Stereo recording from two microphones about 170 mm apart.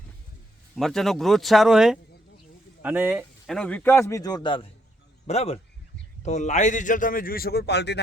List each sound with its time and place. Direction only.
0.8 s speech: centre (ahead or behind)
3.4 s a man's voice: 5° left (ahead or behind); by 4.6 s 25° left (ahead or behind)
5.2 s a man's voice: 40° left (ahead or behind); by 8.0 s 80° left